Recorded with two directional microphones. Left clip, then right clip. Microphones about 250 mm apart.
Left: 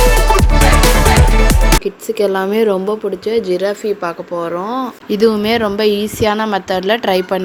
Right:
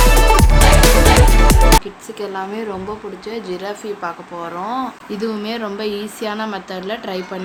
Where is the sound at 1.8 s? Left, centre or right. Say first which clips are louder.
Left 11 dB; left.